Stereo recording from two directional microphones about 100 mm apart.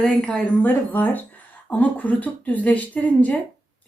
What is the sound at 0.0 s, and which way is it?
Speech, 10° left (ahead or behind).